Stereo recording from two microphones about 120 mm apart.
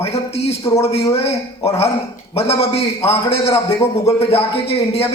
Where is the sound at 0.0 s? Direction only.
60° left (ahead or behind).